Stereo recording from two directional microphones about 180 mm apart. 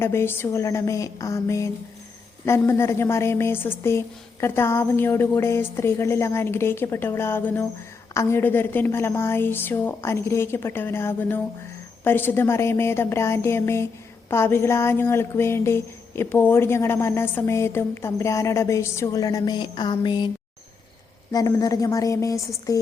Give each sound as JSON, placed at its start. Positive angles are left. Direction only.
{"t": 0.0, "sound": "speech", "side_deg": 15}
{"t": 21.3, "sound": "a woman's voice", "side_deg": 20}